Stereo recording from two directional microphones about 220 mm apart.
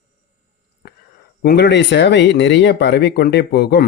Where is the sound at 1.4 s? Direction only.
50° left (ahead or behind).